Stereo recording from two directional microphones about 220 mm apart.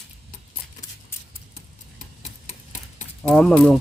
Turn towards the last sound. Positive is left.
turn(degrees=0)  # may be behind; listen again after turning